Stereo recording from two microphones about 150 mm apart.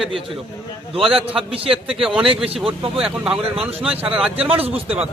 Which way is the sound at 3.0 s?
5° right (ahead or behind).